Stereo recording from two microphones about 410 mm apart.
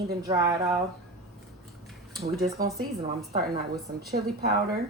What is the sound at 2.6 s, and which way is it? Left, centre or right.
A woman's voice, centre.